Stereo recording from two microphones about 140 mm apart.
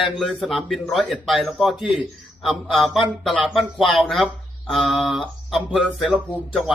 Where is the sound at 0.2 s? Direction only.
Centre (ahead or behind).